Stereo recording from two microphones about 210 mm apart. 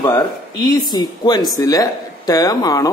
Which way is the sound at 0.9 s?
20° left (ahead or behind).